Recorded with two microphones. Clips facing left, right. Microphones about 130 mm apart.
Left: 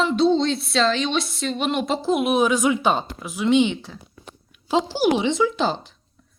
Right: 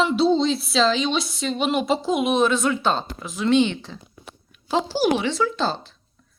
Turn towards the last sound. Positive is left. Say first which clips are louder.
# left 2 dB
turn(degrees=15)  # may be behind; listen again after turning